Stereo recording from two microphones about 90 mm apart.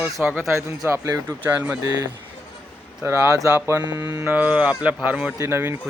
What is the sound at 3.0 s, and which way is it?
Speech, 25° right (ahead or behind).